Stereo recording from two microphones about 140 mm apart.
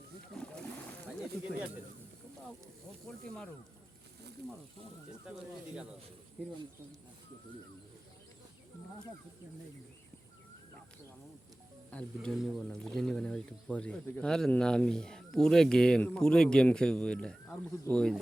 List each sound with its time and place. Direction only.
0.3 s splash: 5° left (ahead or behind)
1.2 s speech: 5° right (ahead or behind)
3.1 s speech: 5° left (ahead or behind)
11.9 s speech: 10° left (ahead or behind)